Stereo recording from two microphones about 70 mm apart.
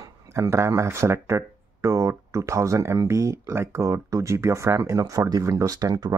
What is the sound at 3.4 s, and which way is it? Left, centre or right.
Speech, right.